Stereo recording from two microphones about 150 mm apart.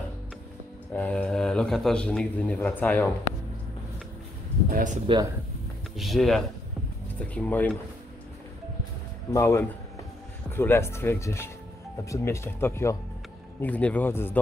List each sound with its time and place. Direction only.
0.9 s a man's voice: 10° left (ahead or behind)
4.6 s speech: 70° right (ahead or behind)
5.9 s a man's voice: centre (ahead or behind)
9.3 s a man's voice: 20° left (ahead or behind)